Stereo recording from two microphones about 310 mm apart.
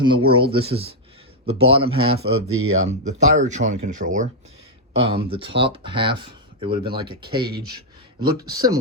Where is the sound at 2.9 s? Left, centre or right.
Right.